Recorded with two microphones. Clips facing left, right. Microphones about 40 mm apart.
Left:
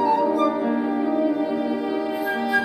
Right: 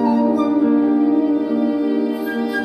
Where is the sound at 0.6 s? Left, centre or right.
Centre.